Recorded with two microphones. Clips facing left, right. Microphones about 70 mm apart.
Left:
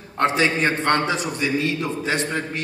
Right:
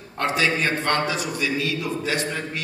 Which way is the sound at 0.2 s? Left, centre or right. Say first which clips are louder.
Left 3 dB; left.